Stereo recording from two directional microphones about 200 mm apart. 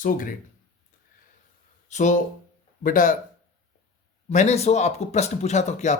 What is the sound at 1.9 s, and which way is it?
Speech, 35° left (ahead or behind).